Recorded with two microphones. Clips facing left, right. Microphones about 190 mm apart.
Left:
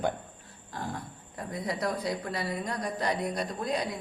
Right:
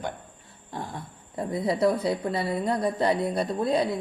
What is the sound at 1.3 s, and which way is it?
A woman's voice, 25° right (ahead or behind).